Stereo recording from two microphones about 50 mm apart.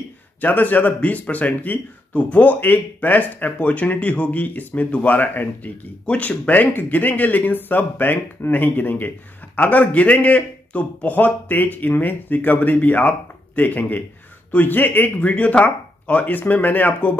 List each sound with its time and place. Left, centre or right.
0.4 s a man's voice: left
6.0 s a man's voice: left
15.1 s a man's voice: left